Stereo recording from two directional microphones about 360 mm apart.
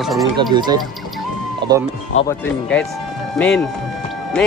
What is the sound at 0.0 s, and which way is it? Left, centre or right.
Speech, centre.